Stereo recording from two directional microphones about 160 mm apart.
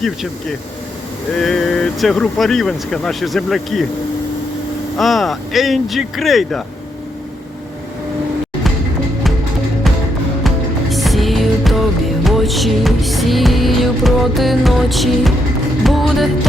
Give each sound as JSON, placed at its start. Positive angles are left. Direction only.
{"t": 1.4, "sound": "speech", "side_deg": 0}
{"t": 4.9, "sound": "speech", "side_deg": 0}
{"t": 10.4, "sound": "music", "side_deg": 0}